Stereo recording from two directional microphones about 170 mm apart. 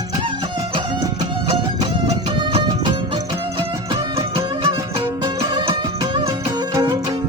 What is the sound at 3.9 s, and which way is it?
Music, 35° right (ahead or behind).